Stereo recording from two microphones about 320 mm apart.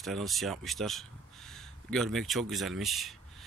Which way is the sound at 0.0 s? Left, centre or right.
Centre.